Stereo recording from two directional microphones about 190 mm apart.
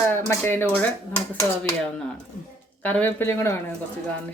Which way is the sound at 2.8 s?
10° left (ahead or behind).